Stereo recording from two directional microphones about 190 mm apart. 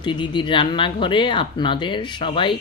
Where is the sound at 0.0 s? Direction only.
25° left (ahead or behind).